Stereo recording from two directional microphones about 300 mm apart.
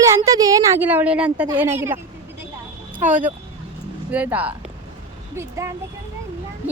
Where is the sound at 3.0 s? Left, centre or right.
Right.